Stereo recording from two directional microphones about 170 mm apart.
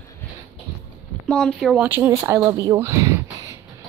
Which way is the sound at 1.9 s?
15° right (ahead or behind).